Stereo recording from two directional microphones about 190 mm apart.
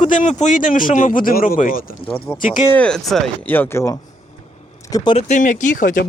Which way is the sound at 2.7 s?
5° left (ahead or behind).